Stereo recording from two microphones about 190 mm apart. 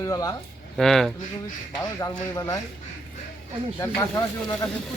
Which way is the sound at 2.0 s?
20° left (ahead or behind).